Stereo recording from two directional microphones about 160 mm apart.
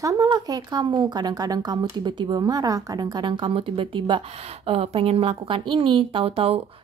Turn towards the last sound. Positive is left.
turn(degrees=-35)  # may be behind; listen again after turning